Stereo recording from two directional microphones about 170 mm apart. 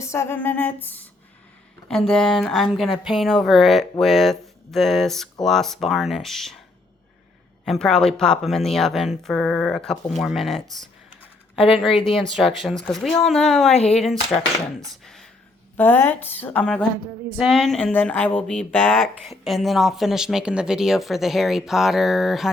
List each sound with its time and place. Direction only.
0.0 s speech: 15° left (ahead or behind)
1.9 s speech: 5° left (ahead or behind)
7.6 s speech: centre (ahead or behind)
11.5 s speech: 35° left (ahead or behind)
12.6 s speech: centre (ahead or behind)
15.8 s speech: 10° left (ahead or behind)
19.0 s speech: centre (ahead or behind)